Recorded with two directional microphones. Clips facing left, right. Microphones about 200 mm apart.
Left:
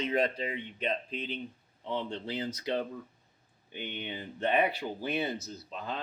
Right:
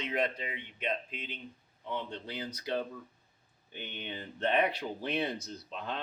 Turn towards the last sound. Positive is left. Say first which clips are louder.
# left 1 dB
turn(degrees=0)  # may be behind; listen again after turning